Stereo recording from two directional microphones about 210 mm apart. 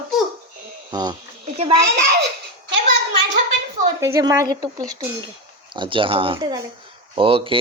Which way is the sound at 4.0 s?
15° right (ahead or behind).